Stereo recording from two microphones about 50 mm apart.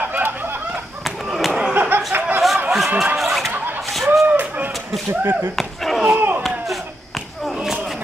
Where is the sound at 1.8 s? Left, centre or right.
Right.